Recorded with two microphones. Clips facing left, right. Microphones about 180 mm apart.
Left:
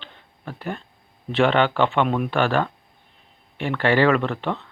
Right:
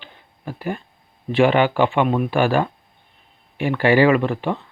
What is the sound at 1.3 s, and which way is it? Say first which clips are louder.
Speech: right 3 dB; 10° right (ahead or behind).